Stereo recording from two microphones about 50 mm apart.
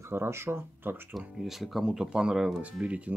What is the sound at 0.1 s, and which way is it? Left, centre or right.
Speech, right.